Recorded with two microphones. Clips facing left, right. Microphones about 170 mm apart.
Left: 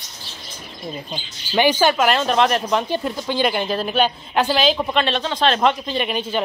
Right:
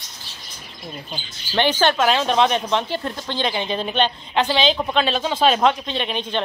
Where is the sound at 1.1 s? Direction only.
10° left (ahead or behind).